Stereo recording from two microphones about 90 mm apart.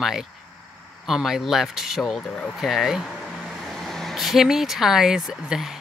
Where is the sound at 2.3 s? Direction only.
15° left (ahead or behind).